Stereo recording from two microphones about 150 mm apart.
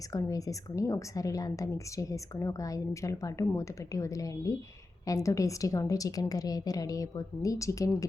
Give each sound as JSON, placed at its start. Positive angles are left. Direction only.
{"t": 0.1, "sound": "a woman's voice", "side_deg": 20}